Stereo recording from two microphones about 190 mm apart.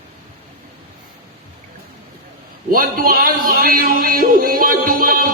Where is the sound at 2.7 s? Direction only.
50° right (ahead or behind).